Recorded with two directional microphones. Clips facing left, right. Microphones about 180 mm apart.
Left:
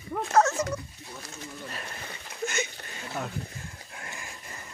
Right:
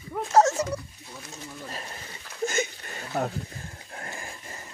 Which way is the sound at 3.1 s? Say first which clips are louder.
Right 7 dB; 40° right (ahead or behind).